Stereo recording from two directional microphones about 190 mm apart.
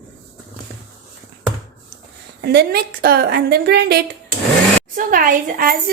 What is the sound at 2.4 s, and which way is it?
A woman's voice, 55° right (ahead or behind).